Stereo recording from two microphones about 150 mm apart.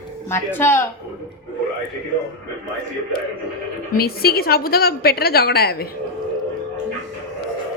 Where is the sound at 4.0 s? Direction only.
90° left.